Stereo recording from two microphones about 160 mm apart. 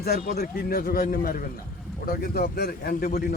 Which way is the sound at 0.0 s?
75° left (ahead or behind).